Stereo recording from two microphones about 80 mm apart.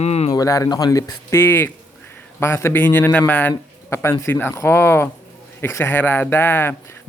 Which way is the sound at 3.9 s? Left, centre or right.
Left.